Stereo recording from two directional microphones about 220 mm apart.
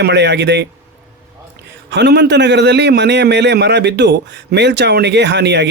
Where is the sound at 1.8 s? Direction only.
50° right (ahead or behind).